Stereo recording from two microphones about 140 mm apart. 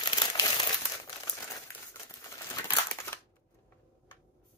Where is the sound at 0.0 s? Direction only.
30° left (ahead or behind).